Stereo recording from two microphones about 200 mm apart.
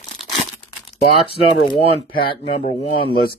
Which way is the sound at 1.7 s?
25° left (ahead or behind).